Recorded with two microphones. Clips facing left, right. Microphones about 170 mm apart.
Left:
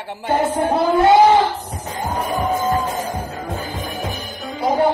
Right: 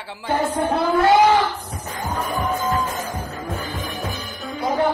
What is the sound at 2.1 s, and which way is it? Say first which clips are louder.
Music: left 3 dB; 10° left (ahead or behind).